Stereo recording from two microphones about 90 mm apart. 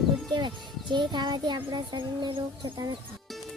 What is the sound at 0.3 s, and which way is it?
A child's voice, 60° right (ahead or behind).